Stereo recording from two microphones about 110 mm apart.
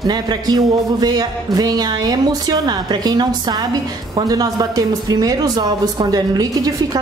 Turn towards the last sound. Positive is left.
turn(degrees=-35)  # may be behind; listen again after turning